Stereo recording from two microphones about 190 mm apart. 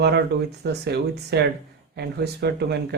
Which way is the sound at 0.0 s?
60° right (ahead or behind).